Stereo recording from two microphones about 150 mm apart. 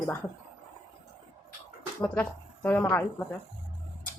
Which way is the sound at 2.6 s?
10° left (ahead or behind).